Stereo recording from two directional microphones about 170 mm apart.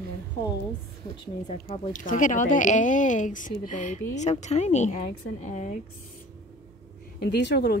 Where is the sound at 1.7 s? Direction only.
50° left (ahead or behind).